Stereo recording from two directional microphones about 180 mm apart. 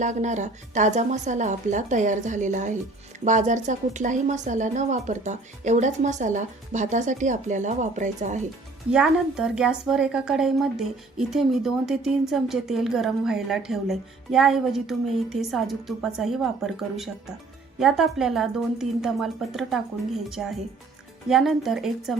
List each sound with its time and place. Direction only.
0.0 s a woman's voice: 40° right (ahead or behind)
8.9 s a woman's voice: 5° right (ahead or behind)